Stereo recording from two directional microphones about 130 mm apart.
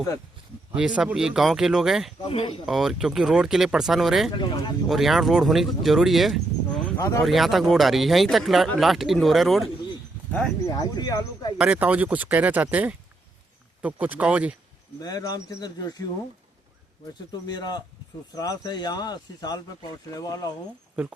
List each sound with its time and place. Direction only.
0.7 s speech: 10° right (ahead or behind)
2.2 s speech: 40° left (ahead or behind)
2.6 s speech: 5° right (ahead or behind)
4.3 s speech: 35° left (ahead or behind)
4.9 s speech: centre (ahead or behind)
10.7 s speech: 30° left (ahead or behind)
11.5 s speech: 10° right (ahead or behind)
15.0 s speech: 30° left (ahead or behind)
17.4 s speech: 30° left (ahead or behind)